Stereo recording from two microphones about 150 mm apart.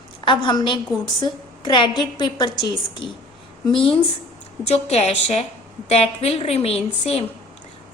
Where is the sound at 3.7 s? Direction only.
35° left (ahead or behind).